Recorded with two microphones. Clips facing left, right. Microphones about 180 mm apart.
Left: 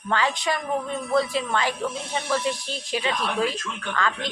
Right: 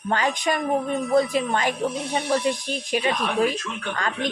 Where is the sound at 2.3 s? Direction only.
15° right (ahead or behind).